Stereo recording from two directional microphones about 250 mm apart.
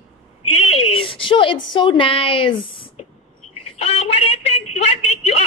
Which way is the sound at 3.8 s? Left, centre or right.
Left.